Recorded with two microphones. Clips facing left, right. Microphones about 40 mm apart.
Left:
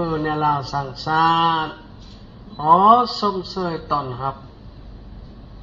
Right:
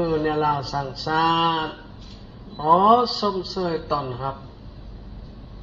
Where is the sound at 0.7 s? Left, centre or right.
Centre.